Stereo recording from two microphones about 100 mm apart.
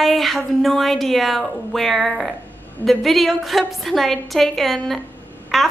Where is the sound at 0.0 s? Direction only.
Centre (ahead or behind).